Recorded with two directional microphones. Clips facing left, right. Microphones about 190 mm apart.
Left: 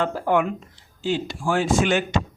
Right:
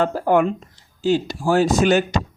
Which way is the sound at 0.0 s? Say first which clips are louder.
Right 4 dB; 40° right (ahead or behind).